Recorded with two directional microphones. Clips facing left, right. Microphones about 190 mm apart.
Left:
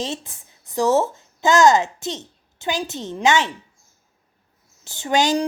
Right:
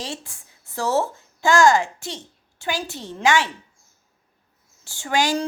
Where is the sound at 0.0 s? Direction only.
20° left (ahead or behind).